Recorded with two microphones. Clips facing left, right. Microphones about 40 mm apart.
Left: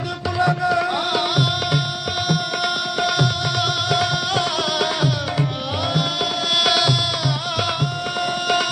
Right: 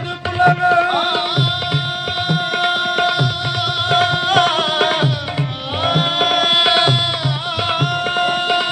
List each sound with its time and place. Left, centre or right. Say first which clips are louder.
0.4 s music: right 6 dB; right
1.3 s music: right 1 dB; right
2.2 s music: right 5 dB; right